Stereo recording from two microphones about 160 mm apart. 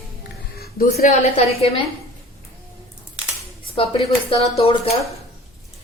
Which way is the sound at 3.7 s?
35° left (ahead or behind).